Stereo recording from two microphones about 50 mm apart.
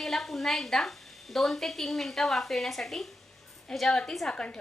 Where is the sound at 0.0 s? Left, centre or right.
Centre.